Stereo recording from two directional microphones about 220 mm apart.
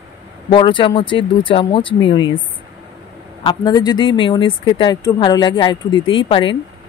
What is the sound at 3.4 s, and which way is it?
Speech, 20° left (ahead or behind).